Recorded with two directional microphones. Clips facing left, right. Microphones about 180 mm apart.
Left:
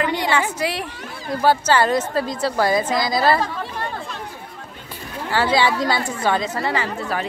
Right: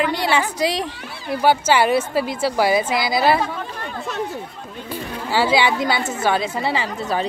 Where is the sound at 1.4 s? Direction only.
5° right (ahead or behind).